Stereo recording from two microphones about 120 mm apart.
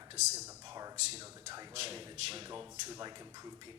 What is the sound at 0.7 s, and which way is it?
Speech, 30° right (ahead or behind).